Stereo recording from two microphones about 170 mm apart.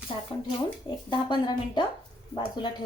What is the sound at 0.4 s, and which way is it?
A woman's voice, 30° left (ahead or behind).